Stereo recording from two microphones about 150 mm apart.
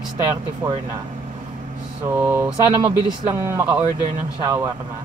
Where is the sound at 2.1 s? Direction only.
15° right (ahead or behind).